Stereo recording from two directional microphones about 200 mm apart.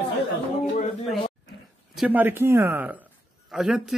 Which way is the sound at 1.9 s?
10° right (ahead or behind).